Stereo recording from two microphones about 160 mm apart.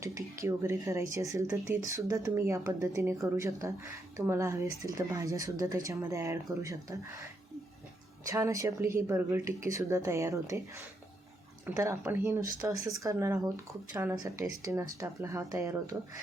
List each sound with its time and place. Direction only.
0.0 s speech: 20° right (ahead or behind)
8.3 s speech: 20° right (ahead or behind)